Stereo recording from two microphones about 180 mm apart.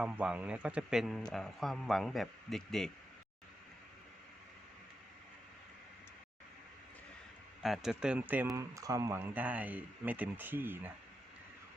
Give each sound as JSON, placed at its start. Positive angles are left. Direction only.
{"t": 0.0, "sound": "a man's voice", "side_deg": -5}
{"t": 7.6, "sound": "speech", "side_deg": 0}